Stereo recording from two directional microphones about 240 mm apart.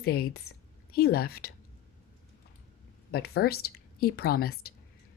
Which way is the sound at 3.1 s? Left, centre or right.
Left.